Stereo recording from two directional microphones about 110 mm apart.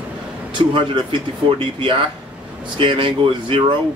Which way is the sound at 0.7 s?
45° right (ahead or behind).